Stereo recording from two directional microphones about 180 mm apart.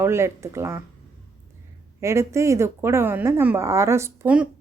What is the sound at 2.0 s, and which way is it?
Speech, 15° right (ahead or behind).